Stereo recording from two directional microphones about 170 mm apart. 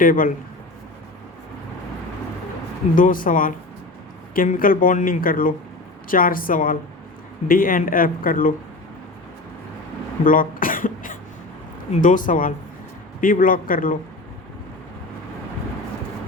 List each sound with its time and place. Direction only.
0.0 s speech: 55° left (ahead or behind)
2.9 s speech: 55° left (ahead or behind)
10.2 s cough: 55° left (ahead or behind)
11.9 s speech: 50° left (ahead or behind)